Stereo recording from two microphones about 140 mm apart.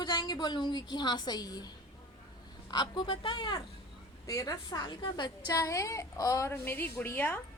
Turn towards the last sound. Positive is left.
turn(degrees=15)  # may be behind; listen again after turning